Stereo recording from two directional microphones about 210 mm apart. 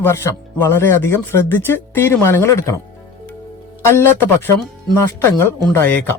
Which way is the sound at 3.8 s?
10° left (ahead or behind).